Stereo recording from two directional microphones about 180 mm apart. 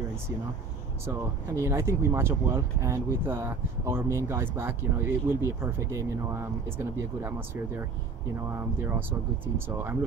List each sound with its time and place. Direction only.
1.5 s speech: 15° right (ahead or behind)